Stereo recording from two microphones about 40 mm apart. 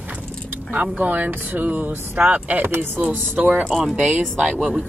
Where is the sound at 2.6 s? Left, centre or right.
Right.